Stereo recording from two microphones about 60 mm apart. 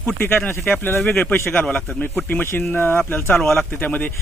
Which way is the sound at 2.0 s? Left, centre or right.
Left.